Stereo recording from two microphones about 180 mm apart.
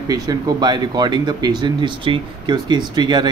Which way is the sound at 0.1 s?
20° right (ahead or behind).